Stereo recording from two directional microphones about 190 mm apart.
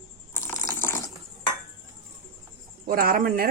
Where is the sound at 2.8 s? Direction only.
50° right (ahead or behind).